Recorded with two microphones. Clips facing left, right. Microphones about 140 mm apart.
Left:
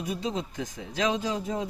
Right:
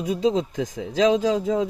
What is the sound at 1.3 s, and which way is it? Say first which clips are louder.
Speech: right 9 dB; 90° right.